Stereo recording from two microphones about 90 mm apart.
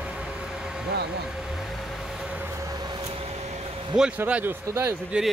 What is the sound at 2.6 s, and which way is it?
Vehicle, 50° right (ahead or behind).